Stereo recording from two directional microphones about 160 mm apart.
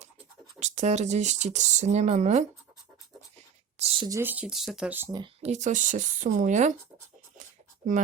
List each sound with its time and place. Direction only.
0.6 s speech: 45° right (ahead or behind)
3.8 s a sound: 40° right (ahead or behind)
4.2 s speech: 10° right (ahead or behind)
5.1 s speech: 30° right (ahead or behind)
5.5 s speech: 50° right (ahead or behind)